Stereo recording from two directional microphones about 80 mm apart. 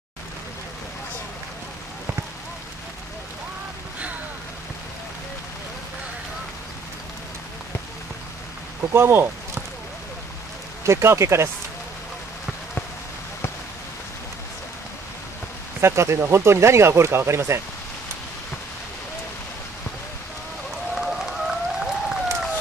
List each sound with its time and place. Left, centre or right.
8.9 s speech: right
10.8 s speech: right
15.8 s speech: right
20.9 s a sound: centre